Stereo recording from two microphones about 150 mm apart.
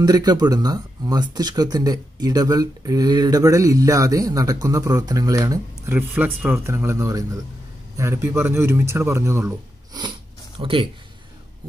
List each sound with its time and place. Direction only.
0.0 s a man's voice: 25° right (ahead or behind)
10.6 s speech: 35° right (ahead or behind)